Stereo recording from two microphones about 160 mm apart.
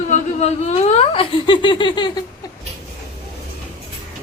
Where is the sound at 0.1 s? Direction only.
45° left (ahead or behind); by 2.2 s 30° left (ahead or behind).